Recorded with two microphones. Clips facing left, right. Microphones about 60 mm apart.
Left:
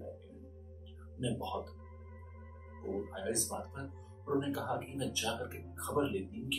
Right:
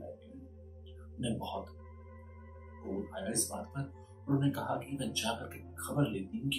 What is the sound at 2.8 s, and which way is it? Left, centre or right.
Speech, centre.